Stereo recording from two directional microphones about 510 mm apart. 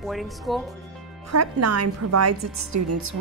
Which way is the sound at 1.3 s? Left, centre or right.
Right.